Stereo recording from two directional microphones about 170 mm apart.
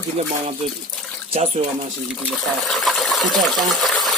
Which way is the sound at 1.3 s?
35° right (ahead or behind).